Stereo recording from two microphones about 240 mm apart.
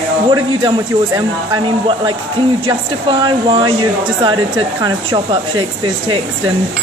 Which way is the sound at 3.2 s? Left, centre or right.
Centre.